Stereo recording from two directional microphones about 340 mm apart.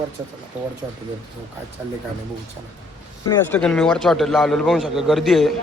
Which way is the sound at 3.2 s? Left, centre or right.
Centre.